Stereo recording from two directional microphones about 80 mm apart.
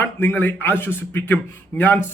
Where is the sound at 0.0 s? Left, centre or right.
Left.